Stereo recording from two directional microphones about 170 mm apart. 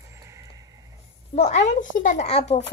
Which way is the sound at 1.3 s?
40° left (ahead or behind).